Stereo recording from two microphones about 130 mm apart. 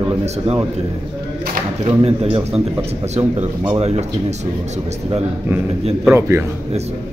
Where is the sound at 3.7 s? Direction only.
55° right (ahead or behind).